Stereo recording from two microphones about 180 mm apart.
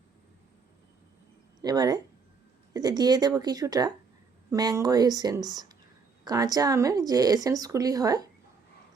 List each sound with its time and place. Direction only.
1.6 s speech: 20° right (ahead or behind)